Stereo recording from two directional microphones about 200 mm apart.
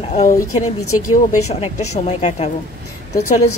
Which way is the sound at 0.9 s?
90° left.